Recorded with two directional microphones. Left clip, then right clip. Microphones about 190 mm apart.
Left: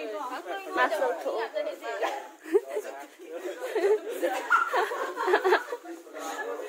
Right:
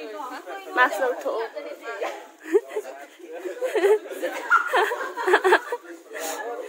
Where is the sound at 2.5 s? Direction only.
20° right (ahead or behind).